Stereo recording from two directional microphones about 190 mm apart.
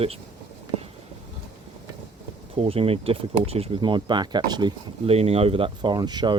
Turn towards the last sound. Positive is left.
turn(degrees=-20)  # may be behind; listen again after turning